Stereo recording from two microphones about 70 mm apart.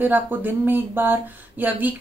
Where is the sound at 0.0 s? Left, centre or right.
Right.